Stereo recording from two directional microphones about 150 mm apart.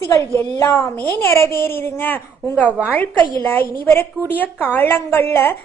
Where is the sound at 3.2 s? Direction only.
30° right (ahead or behind).